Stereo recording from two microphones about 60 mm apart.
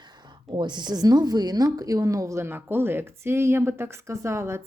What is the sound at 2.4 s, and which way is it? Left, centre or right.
Speech, right.